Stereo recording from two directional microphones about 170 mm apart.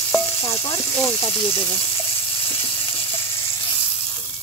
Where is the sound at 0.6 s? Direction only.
20° left (ahead or behind).